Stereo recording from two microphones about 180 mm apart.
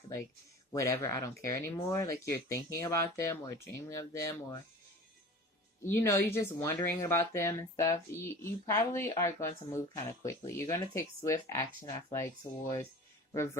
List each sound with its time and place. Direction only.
0.7 s speech: 15° left (ahead or behind)
5.8 s speech: 15° left (ahead or behind)
13.3 s speech: 15° left (ahead or behind)